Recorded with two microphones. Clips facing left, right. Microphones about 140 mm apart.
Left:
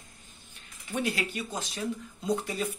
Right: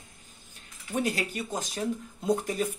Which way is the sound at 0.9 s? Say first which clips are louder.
Right 2 dB; 40° right (ahead or behind).